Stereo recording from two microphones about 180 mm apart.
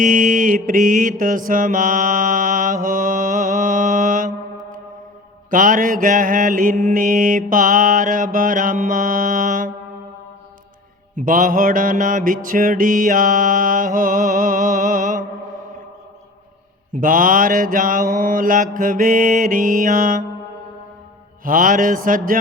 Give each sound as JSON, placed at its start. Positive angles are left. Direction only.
{"t": 0.0, "sound": "mantra", "side_deg": -50}
{"t": 5.5, "sound": "mantra", "side_deg": -50}
{"t": 11.1, "sound": "mantra", "side_deg": -45}
{"t": 16.9, "sound": "mantra", "side_deg": -50}
{"t": 21.4, "sound": "mantra", "side_deg": -50}